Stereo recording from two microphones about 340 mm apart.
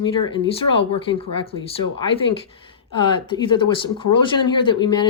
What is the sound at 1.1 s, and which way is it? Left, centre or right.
Speech, centre.